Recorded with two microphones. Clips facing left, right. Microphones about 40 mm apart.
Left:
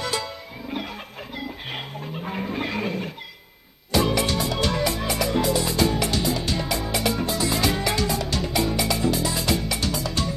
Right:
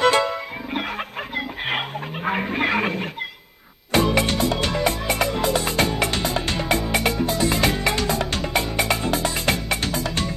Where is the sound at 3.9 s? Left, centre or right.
Right.